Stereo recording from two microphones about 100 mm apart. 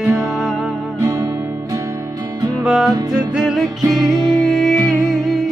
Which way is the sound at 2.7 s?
5° right (ahead or behind).